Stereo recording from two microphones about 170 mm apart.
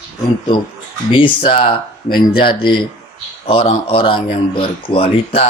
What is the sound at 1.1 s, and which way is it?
A man's voice, 30° left (ahead or behind).